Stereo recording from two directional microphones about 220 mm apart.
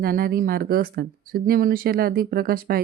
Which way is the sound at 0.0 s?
40° right (ahead or behind).